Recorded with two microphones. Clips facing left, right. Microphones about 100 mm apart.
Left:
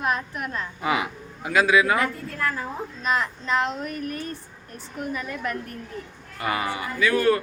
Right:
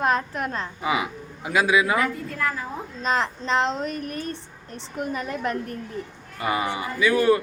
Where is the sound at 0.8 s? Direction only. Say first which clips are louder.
Left 1 dB; 5° right (ahead or behind).